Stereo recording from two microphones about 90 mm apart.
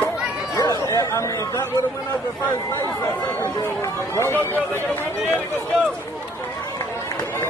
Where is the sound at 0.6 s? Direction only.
40° left (ahead or behind).